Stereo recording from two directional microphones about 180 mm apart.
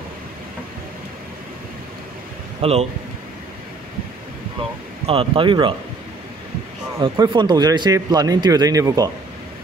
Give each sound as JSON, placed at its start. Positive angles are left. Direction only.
{"t": 2.6, "sound": "speech", "side_deg": -35}
{"t": 5.0, "sound": "speech", "side_deg": -30}
{"t": 7.0, "sound": "speech", "side_deg": -25}